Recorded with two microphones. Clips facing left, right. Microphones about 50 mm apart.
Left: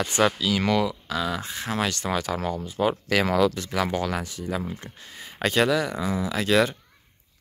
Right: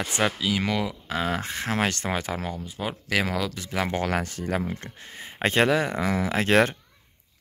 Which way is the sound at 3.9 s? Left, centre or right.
Right.